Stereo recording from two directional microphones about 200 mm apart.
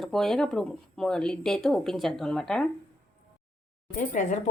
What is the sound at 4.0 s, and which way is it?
Speech, 35° left (ahead or behind).